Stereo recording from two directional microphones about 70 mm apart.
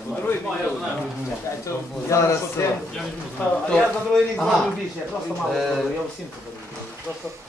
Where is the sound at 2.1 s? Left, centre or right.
Left.